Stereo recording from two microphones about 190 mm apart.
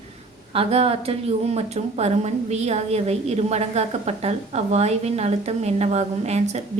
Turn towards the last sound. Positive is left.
turn(degrees=-35)  # may be behind; listen again after turning